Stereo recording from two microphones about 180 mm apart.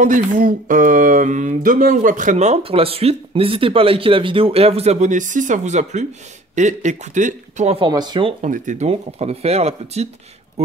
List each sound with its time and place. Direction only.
0.0 s speech: 45° right (ahead or behind)
7.8 s speech: 25° right (ahead or behind)
8.5 s speech: 40° right (ahead or behind)